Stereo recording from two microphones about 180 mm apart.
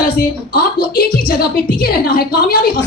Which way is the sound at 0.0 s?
55° left (ahead or behind).